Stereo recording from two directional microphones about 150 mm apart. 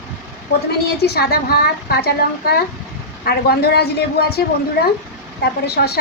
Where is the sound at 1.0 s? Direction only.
90° left.